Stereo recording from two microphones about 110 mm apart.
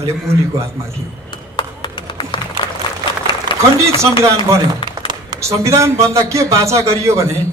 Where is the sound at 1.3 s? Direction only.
40° left (ahead or behind).